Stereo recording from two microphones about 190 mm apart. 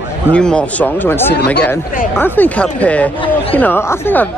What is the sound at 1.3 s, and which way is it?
Speech, 60° left (ahead or behind).